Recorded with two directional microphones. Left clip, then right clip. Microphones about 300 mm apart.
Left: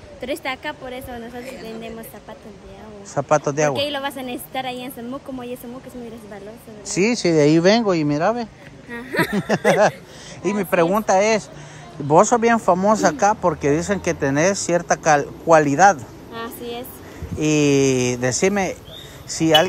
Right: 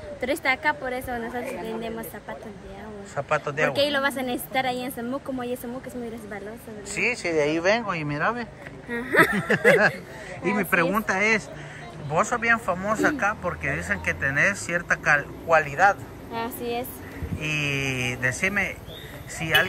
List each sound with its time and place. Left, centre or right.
0.2 s a woman's voice: centre
3.3 s speech: centre
3.7 s a woman's voice: centre
6.9 s speech: left
12.1 s speech: centre
16.3 s a woman's voice: centre
17.4 s speech: centre